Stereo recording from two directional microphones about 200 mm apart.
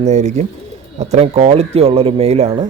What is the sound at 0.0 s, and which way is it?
Speech, 35° right (ahead or behind).